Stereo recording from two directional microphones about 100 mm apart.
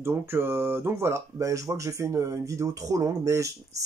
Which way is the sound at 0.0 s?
25° right (ahead or behind).